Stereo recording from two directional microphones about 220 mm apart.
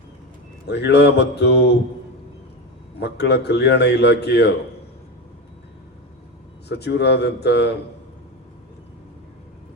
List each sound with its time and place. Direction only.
0.7 s a man's voice: 50° left (ahead or behind)
3.0 s a man's voice: 50° left (ahead or behind)
6.7 s a man's voice: 50° left (ahead or behind)